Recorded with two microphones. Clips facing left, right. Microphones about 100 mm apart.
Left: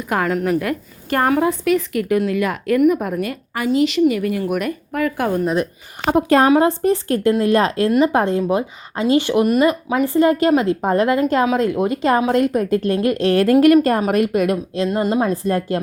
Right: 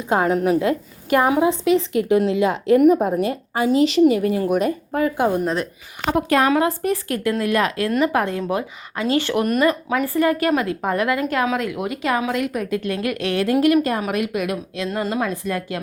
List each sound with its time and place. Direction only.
0.0 s a woman's voice: 25° right (ahead or behind)
6.1 s a woman's voice: 30° left (ahead or behind)